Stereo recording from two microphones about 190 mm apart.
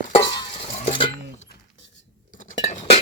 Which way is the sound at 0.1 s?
25° left (ahead or behind).